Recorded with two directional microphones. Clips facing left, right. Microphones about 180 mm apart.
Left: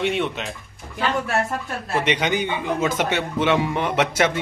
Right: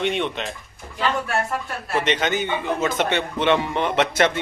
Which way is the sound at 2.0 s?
10° left (ahead or behind).